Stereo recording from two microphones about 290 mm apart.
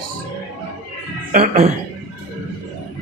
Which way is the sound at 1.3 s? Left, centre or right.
Right.